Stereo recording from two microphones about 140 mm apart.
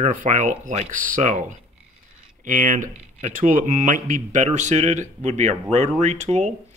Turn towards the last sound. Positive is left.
turn(degrees=-55)  # may be behind; listen again after turning